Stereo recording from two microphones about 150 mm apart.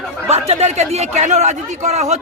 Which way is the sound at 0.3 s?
45° right (ahead or behind).